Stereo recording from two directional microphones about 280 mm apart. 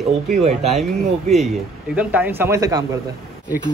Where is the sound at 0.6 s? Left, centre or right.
Centre.